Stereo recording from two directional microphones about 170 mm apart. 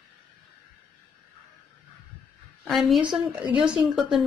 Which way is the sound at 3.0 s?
25° right (ahead or behind).